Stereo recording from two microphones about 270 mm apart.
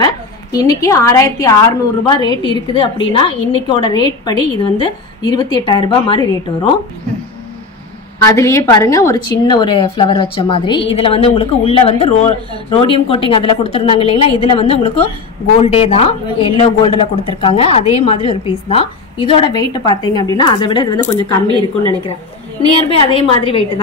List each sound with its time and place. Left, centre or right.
0.0 s a woman's voice: centre
8.2 s a woman's voice: centre
21.5 s a woman's voice: centre
22.8 s a woman's voice: centre